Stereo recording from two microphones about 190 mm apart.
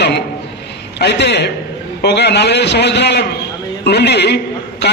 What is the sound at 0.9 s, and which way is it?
A man's voice, 60° left (ahead or behind).